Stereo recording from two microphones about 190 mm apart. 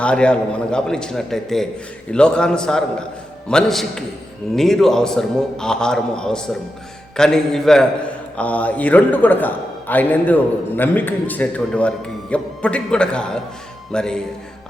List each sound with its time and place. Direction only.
0.0 s a man's voice: 5° left (ahead or behind)